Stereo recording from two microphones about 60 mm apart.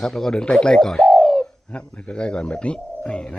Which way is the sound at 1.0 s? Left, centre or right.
Centre.